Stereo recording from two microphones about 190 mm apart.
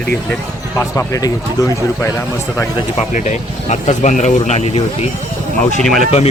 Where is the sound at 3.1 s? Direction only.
40° left (ahead or behind).